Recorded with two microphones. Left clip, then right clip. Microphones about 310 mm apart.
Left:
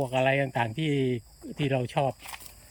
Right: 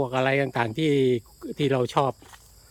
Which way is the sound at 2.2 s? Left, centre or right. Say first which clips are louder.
Left 7 dB; left.